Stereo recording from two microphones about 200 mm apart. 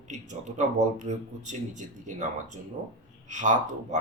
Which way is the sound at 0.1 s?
35° right (ahead or behind).